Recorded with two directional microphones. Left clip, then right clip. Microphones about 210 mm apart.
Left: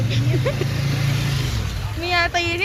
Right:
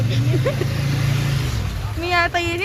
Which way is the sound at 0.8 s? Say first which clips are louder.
Even; 35° left (ahead or behind).